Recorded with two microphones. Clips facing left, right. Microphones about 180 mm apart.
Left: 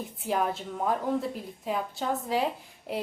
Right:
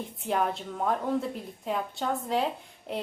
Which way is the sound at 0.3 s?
Centre (ahead or behind).